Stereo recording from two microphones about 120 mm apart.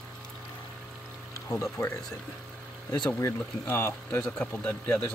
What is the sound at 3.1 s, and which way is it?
Speech, 20° left (ahead or behind).